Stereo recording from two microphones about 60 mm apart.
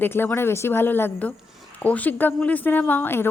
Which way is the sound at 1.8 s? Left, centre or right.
Left.